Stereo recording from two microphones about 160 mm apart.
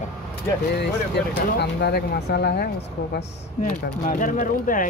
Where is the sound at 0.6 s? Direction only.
90° left.